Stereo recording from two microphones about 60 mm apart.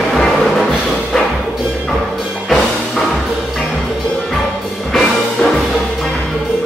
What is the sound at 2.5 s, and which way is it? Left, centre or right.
Music, centre.